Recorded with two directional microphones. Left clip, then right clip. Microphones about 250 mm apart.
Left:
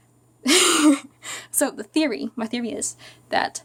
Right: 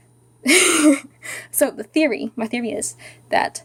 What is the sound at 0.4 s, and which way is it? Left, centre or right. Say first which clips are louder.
Speech: right 2 dB; centre.